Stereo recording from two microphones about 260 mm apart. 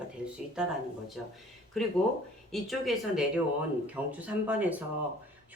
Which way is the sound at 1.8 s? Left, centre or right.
Centre.